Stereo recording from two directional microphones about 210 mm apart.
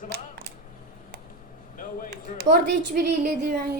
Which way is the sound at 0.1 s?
50° right (ahead or behind).